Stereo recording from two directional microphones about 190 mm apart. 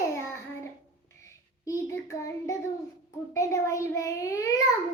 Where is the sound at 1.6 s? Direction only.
15° left (ahead or behind).